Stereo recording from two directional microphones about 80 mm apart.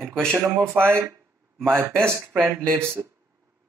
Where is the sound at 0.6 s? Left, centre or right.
Right.